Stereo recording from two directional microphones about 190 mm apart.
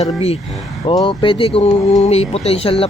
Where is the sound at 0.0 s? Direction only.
30° left (ahead or behind).